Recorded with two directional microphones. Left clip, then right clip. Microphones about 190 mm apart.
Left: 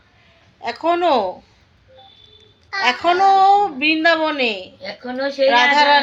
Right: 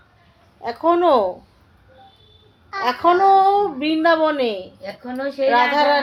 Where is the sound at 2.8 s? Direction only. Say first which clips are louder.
Even; 10° left (ahead or behind).